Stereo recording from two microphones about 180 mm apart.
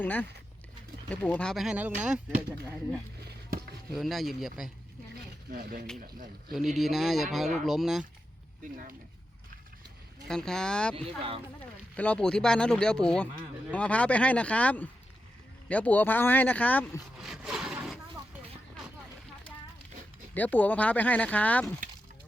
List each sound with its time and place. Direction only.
0.0 s speech: 10° left (ahead or behind); by 2.2 s 10° right (ahead or behind)
3.2 s a sound: 65° right (ahead or behind)
3.9 s speech: centre (ahead or behind)
5.5 s speech: 55° right (ahead or behind)
6.5 s speech: centre (ahead or behind)
8.6 s speech: 50° right (ahead or behind)
10.2 s speech: 5° left (ahead or behind)
11.9 s speech: 5° left (ahead or behind)
17.2 s a sound: centre (ahead or behind)
20.3 s speech: 10° left (ahead or behind)